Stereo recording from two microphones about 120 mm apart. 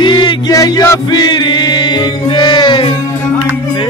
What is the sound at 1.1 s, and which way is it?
Music, 35° left (ahead or behind).